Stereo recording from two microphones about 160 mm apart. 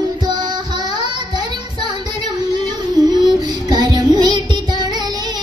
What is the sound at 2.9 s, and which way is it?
Child singing, 25° right (ahead or behind).